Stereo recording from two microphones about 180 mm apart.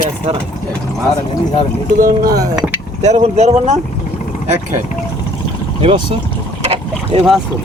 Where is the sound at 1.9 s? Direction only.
55° right (ahead or behind).